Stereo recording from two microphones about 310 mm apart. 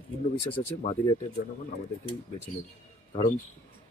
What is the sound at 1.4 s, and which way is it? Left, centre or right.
Speech, left.